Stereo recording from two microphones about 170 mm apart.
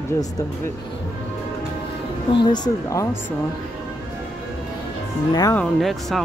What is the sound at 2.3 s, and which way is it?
Speech, 25° left (ahead or behind).